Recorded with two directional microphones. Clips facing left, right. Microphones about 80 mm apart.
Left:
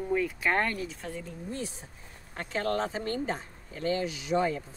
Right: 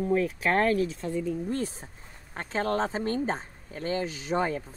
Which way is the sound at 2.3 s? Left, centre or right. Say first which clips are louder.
Right 2 dB; right.